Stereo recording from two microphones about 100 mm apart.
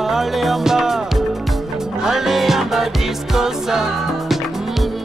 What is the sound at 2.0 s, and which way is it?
Music, 5° right (ahead or behind).